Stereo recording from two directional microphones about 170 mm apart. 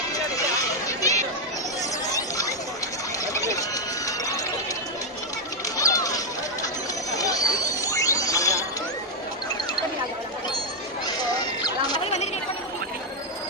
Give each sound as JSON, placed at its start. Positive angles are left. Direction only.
{"t": 0.1, "sound": "a sound", "side_deg": 20}
{"t": 1.8, "sound": "chatter", "side_deg": 20}
{"t": 3.3, "sound": "music", "side_deg": 20}
{"t": 5.8, "sound": "music", "side_deg": 20}
{"t": 7.1, "sound": "a sound", "side_deg": 20}
{"t": 11.9, "sound": "chatter", "side_deg": 35}